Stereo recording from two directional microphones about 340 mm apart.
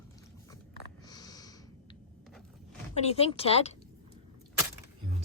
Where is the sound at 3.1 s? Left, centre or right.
Centre.